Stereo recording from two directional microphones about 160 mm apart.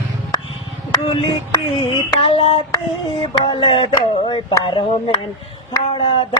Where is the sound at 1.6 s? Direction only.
35° left (ahead or behind).